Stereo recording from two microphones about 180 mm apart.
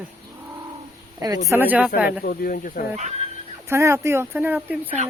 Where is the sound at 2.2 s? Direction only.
55° left (ahead or behind).